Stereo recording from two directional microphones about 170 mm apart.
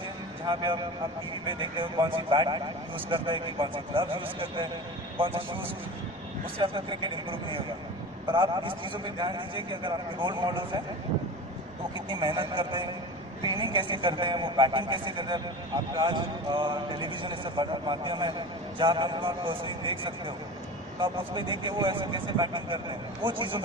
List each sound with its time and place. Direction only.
0.5 s a man's voice: 25° right (ahead or behind)
6.6 s a man's voice: 30° right (ahead or behind)
12.1 s a man's voice: 30° right (ahead or behind)